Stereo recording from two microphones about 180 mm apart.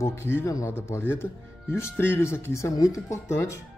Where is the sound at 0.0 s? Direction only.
15° left (ahead or behind).